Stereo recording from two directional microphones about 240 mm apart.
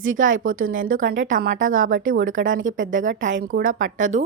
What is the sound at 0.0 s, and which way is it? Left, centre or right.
Speech, right.